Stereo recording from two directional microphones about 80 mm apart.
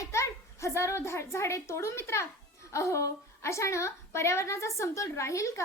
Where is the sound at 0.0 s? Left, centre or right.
Left.